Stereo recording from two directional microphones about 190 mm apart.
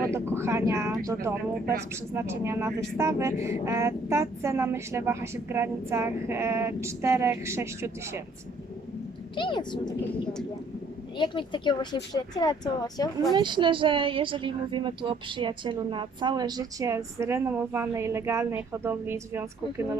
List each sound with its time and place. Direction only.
0.1 s speech: 15° right (ahead or behind)
9.3 s speech: 25° left (ahead or behind)
11.2 s speech: 25° left (ahead or behind)
13.3 s a woman's voice: 25° right (ahead or behind)